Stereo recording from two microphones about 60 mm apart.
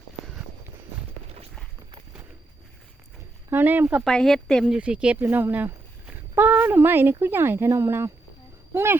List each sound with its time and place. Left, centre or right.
3.5 s speech: right
4.1 s speech: centre
4.6 s speech: centre
5.2 s speech: right